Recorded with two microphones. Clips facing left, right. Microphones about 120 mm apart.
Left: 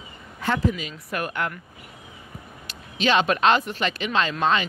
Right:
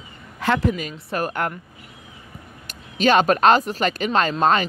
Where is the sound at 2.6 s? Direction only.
45° right (ahead or behind).